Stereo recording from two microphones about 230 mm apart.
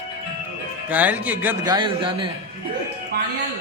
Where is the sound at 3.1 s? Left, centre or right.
Right.